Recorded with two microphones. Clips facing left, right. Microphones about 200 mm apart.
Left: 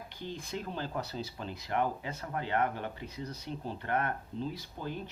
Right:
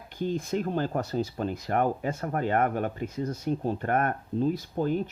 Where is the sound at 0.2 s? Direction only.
45° right (ahead or behind).